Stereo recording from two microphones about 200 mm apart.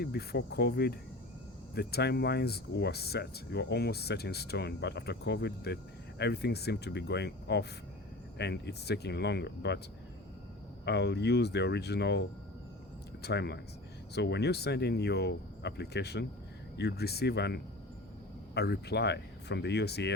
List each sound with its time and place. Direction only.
0.0 s cricket: 50° left (ahead or behind)
1.7 s speech: 55° left (ahead or behind)
10.8 s speech: 60° left (ahead or behind)
13.2 s speech: 55° left (ahead or behind)